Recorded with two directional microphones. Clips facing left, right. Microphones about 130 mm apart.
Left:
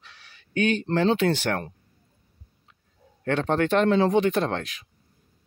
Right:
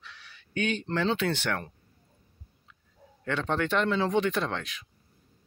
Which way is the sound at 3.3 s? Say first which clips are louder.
Left 6 dB; 45° left (ahead or behind).